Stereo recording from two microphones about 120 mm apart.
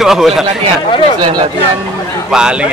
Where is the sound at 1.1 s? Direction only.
35° right (ahead or behind).